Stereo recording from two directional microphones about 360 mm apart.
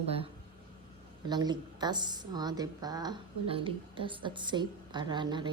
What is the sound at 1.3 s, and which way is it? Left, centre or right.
Speech, centre.